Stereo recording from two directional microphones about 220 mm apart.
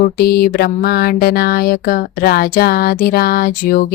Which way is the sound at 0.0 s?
45° left (ahead or behind).